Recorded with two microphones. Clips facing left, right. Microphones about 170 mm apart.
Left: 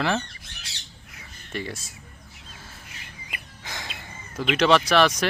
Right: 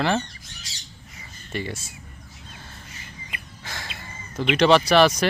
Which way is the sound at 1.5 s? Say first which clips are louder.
Right 2 dB; centre (ahead or behind).